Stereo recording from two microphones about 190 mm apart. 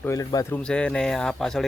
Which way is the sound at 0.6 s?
5° left (ahead or behind).